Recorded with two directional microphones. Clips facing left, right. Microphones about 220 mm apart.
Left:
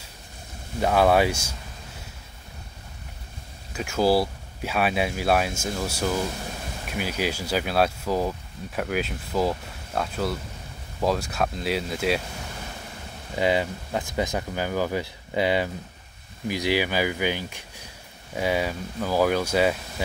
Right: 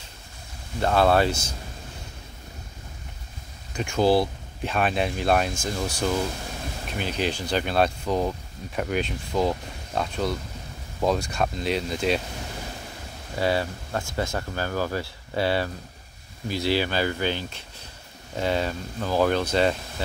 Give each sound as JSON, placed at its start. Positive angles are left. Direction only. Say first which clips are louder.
{"t": 0.7, "sound": "speech", "louder": "left 1 dB", "side_deg": 10}
{"t": 3.7, "sound": "speech", "louder": "right 1 dB", "side_deg": 5}
{"t": 13.4, "sound": "speech", "louder": "left 1 dB", "side_deg": 15}